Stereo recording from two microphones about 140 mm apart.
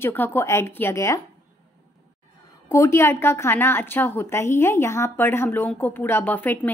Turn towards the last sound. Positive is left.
turn(degrees=15)  # may be behind; listen again after turning